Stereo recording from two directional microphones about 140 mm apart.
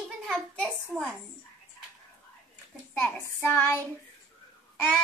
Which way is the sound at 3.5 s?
15° left (ahead or behind).